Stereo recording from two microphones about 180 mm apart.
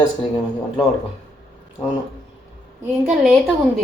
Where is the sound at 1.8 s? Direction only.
15° left (ahead or behind).